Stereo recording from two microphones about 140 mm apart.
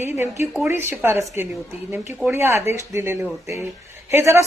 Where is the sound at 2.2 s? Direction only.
20° right (ahead or behind).